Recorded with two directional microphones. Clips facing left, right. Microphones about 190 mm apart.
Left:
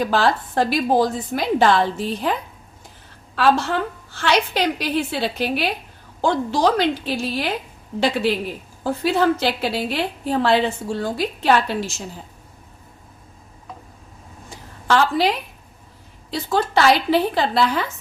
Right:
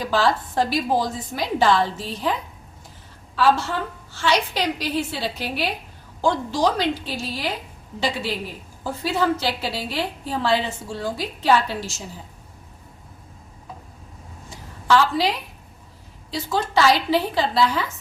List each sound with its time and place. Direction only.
0.0 s a woman's voice: 60° left (ahead or behind)
3.3 s a woman's voice: 65° left (ahead or behind)
8.8 s a woman's voice: 60° left (ahead or behind)
14.8 s a woman's voice: 55° left (ahead or behind)
16.3 s a woman's voice: 55° left (ahead or behind)